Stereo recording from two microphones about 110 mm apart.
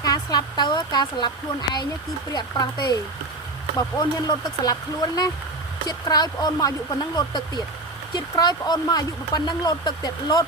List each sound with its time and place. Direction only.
0.0 s speech: 35° left (ahead or behind)
2.3 s speech: 40° left (ahead or behind)